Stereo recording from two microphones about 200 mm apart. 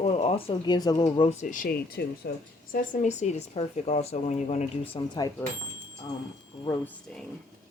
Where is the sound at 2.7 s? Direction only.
40° left (ahead or behind).